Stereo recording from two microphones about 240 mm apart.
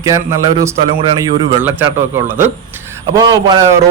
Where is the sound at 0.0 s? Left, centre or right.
Centre.